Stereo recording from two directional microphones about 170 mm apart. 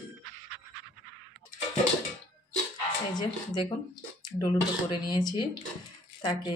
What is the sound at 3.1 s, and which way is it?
Speech, 25° left (ahead or behind).